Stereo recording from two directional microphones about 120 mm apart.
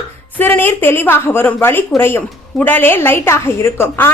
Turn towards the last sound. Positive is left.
turn(degrees=20)  # may be behind; listen again after turning